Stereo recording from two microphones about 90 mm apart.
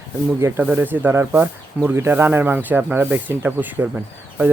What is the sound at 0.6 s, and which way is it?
Speech, 20° right (ahead or behind).